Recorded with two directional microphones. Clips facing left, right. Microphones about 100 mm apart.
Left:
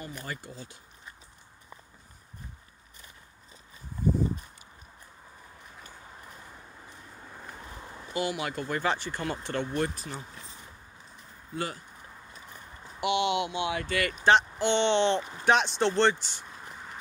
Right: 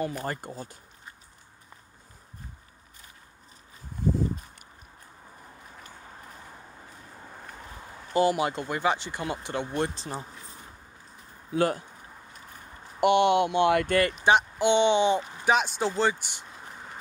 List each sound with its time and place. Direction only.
0.1 s speech: 45° right (ahead or behind)
7.5 s a sound: 5° right (ahead or behind)
8.1 s speech: 35° right (ahead or behind)
8.6 s speech: 15° right (ahead or behind)
11.5 s speech: 55° right (ahead or behind)
13.0 s speech: 50° right (ahead or behind)
14.2 s speech: 15° right (ahead or behind)